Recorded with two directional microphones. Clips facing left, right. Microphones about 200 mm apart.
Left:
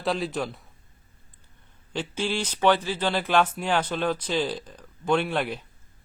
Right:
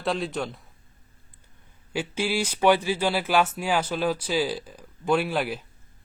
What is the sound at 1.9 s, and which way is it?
Speech, 10° right (ahead or behind).